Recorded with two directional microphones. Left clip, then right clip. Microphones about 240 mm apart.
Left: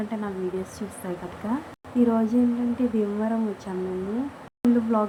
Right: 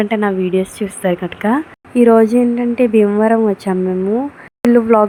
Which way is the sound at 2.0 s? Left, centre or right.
Right.